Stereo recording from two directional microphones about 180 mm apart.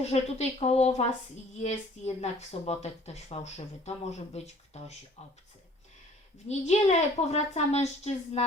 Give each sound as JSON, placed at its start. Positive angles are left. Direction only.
{"t": 0.0, "sound": "speech", "side_deg": 35}
{"t": 6.5, "sound": "speech", "side_deg": 40}